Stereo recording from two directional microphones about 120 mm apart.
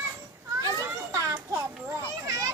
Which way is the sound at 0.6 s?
30° right (ahead or behind).